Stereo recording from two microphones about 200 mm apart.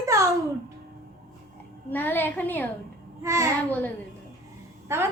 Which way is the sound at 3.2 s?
15° right (ahead or behind).